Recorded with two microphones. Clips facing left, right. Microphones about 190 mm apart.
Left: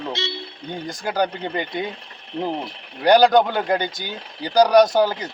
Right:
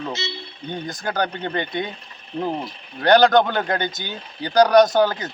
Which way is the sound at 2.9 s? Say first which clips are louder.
Even; 10° left (ahead or behind).